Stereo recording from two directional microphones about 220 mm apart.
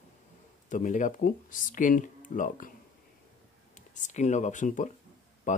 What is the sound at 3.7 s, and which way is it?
Speech, 35° left (ahead or behind).